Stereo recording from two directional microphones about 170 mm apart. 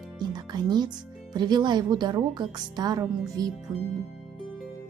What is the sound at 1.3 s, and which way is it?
Speech, 25° right (ahead or behind).